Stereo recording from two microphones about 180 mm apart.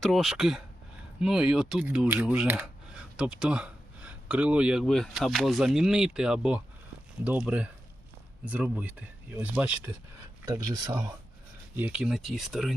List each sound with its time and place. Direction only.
0.0 s speech: centre (ahead or behind)
10.4 s speech: 20° right (ahead or behind)
11.8 s speech: 5° right (ahead or behind)